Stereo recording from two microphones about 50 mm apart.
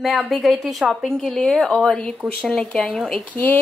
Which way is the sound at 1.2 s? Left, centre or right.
Centre.